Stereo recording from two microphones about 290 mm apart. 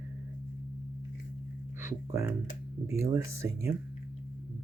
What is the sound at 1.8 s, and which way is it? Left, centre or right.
Speech, centre.